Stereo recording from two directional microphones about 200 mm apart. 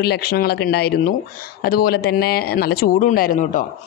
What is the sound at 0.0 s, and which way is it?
A man's voice, 50° left (ahead or behind).